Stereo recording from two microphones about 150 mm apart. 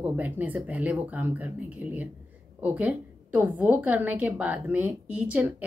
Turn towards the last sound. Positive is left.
turn(degrees=-10)  # may be behind; listen again after turning